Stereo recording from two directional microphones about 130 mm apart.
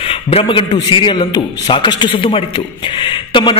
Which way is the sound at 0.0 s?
45° left (ahead or behind).